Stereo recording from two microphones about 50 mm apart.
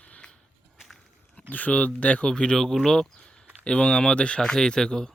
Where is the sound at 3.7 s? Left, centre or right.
Left.